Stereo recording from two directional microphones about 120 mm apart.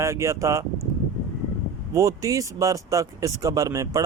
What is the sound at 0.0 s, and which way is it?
Speech, 25° right (ahead or behind).